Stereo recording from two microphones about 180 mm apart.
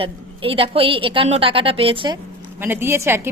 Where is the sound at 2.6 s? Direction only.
10° right (ahead or behind).